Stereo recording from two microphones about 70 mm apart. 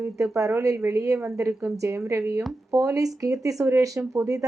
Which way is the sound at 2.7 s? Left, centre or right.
Right.